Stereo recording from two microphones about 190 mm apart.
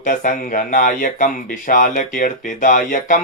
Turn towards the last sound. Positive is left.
turn(degrees=45)  # may be behind; listen again after turning